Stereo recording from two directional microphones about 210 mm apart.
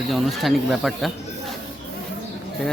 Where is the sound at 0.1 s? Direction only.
Centre (ahead or behind).